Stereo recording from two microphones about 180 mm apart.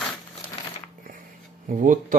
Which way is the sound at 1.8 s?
45° right (ahead or behind).